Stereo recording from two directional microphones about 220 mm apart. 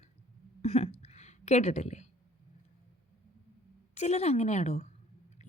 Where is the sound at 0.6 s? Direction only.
30° left (ahead or behind).